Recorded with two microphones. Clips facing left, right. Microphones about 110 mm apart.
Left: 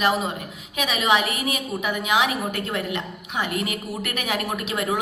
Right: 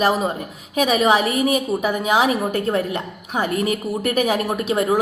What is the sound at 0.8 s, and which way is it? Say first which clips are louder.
A woman's voice: right 5 dB; 40° right (ahead or behind).